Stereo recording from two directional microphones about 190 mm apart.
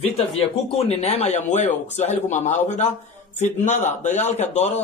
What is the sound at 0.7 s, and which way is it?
Speech, 30° left (ahead or behind).